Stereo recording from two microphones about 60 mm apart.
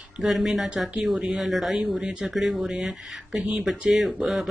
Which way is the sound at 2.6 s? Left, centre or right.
Centre.